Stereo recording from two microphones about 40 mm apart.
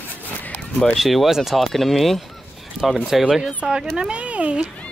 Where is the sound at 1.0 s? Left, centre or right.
Centre.